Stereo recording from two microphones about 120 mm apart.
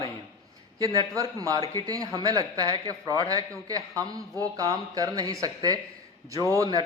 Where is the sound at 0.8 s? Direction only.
30° right (ahead or behind).